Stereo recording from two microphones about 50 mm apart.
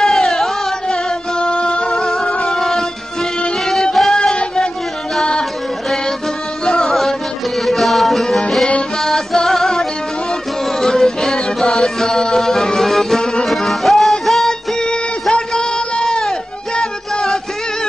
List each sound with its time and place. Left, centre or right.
0.0 s music: centre
4.1 s music: centre
6.6 s music: centre
14.9 s a sound: centre